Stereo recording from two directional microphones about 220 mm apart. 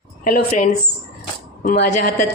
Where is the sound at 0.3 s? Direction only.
40° left (ahead or behind).